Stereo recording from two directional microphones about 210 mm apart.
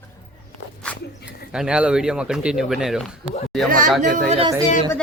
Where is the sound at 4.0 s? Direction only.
35° right (ahead or behind).